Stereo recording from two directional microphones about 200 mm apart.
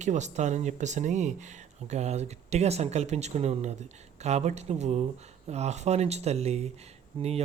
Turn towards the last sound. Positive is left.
turn(degrees=-30)  # may be behind; listen again after turning